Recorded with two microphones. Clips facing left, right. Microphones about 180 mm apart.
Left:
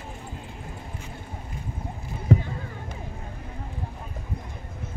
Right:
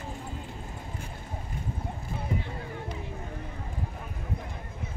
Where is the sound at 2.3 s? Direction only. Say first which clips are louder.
Left 11 dB; 80° left.